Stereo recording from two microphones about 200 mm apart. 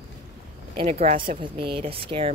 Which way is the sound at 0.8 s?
35° right (ahead or behind).